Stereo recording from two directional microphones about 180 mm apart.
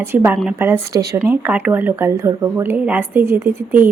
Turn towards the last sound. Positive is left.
turn(degrees=-15)  # may be behind; listen again after turning